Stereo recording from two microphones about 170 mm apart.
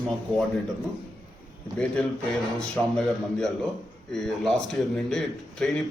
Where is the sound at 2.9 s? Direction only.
5° left (ahead or behind).